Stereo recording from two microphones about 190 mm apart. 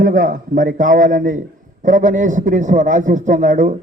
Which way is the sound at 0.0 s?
45° right (ahead or behind).